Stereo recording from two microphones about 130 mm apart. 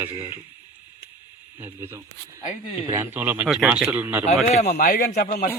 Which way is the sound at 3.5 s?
5° right (ahead or behind).